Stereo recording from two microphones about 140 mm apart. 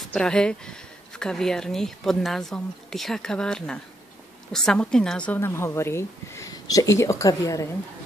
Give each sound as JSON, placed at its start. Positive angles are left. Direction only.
{"t": 0.1, "sound": "a woman's voice", "side_deg": 5}